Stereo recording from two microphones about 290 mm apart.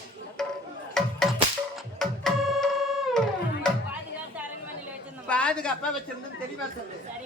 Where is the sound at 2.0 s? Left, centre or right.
Centre.